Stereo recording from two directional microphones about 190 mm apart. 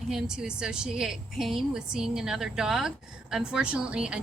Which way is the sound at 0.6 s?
5° right (ahead or behind).